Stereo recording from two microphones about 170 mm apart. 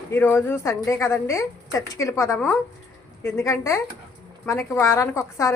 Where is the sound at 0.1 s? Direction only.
15° left (ahead or behind).